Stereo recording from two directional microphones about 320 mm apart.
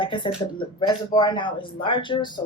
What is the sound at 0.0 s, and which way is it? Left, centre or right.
Speech, centre.